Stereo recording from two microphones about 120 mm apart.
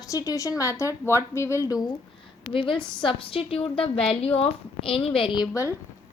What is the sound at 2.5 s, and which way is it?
A woman's voice, 45° left (ahead or behind).